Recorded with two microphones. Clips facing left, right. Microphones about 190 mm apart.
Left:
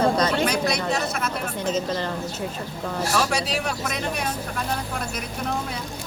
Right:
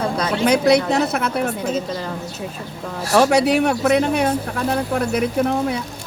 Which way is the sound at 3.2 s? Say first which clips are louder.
Right 13 dB; 65° right (ahead or behind).